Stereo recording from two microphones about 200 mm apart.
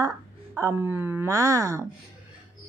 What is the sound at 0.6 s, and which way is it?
Speech, 15° right (ahead or behind).